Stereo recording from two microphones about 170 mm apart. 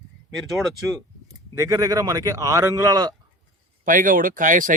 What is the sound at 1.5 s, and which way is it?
Speech, 20° right (ahead or behind).